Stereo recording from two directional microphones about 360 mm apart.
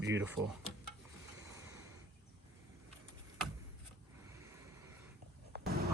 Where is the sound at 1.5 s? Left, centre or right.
Centre.